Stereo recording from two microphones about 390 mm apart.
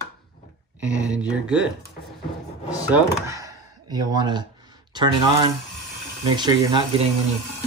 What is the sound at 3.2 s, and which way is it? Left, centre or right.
A man's voice, centre.